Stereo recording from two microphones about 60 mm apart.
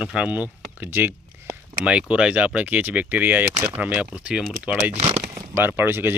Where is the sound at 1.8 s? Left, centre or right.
Centre.